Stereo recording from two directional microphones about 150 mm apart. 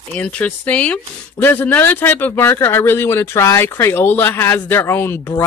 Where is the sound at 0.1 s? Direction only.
10° left (ahead or behind).